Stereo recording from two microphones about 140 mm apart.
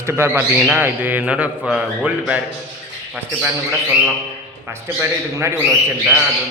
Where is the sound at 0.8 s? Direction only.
10° right (ahead or behind).